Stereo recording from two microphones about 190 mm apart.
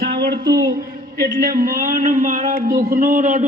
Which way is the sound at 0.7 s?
50° right (ahead or behind).